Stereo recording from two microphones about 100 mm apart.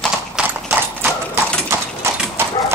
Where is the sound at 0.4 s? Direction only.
10° right (ahead or behind).